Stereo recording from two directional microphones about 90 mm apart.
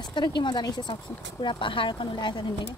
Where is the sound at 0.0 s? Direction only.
60° left (ahead or behind).